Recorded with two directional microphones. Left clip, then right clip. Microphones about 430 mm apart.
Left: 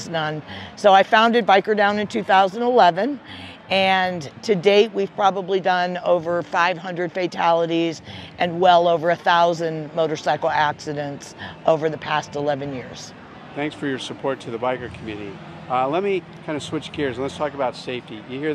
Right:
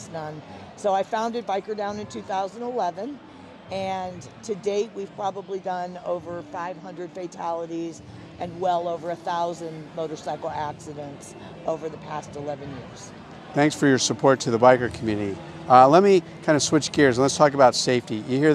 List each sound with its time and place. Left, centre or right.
0.8 s speech: left
13.6 s speech: right